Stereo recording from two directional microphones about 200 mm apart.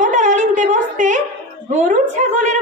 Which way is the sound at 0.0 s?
40° right (ahead or behind).